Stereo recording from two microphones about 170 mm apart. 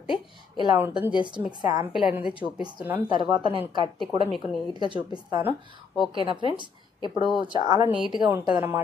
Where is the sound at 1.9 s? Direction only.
5° right (ahead or behind).